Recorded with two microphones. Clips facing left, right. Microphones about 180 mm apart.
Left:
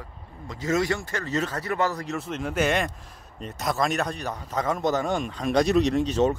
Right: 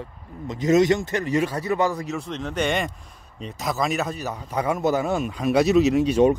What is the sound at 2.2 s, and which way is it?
Speech, 5° left (ahead or behind).